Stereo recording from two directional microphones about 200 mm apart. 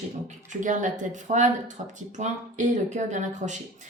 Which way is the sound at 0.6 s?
40° right (ahead or behind).